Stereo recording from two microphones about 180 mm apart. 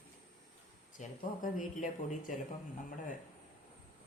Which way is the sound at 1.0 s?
45° left (ahead or behind).